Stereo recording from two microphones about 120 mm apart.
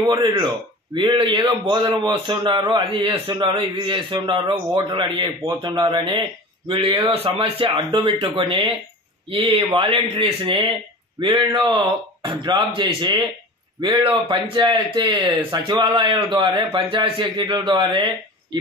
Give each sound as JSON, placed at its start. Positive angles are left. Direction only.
{"t": 0.0, "sound": "speech", "side_deg": -30}
{"t": 0.9, "sound": "a man's voice", "side_deg": -45}